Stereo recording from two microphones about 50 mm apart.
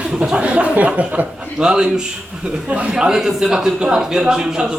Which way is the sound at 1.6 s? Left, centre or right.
Centre.